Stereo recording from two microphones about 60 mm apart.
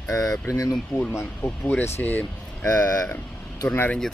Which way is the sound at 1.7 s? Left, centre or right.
Left.